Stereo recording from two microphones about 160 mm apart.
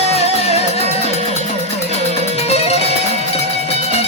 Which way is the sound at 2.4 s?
40° left (ahead or behind).